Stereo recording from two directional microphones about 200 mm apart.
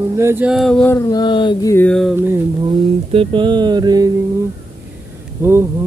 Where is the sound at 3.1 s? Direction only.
25° right (ahead or behind).